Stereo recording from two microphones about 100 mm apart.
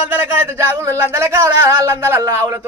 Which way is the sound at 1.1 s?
30° right (ahead or behind).